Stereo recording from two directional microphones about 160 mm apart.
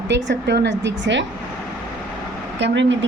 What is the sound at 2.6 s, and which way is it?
Speech, 90° right.